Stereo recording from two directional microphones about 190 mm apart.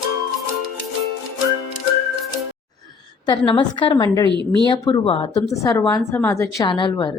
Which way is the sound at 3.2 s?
25° left (ahead or behind).